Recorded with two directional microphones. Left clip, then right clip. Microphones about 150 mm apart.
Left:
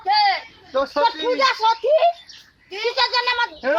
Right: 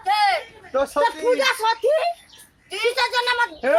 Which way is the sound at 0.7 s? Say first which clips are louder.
Even; 25° right (ahead or behind).